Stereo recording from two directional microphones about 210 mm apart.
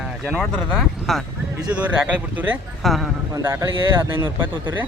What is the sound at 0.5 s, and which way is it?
Speech, centre (ahead or behind).